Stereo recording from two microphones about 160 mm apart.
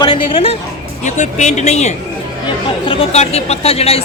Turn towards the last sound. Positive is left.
turn(degrees=40)  # may be behind; listen again after turning